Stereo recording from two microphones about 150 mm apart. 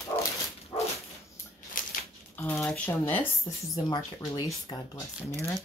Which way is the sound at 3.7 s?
25° left (ahead or behind).